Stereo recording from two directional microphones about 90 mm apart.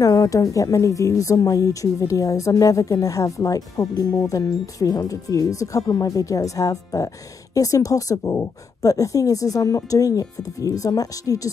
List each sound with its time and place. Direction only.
0.0 s a woman's voice: 40° left (ahead or behind)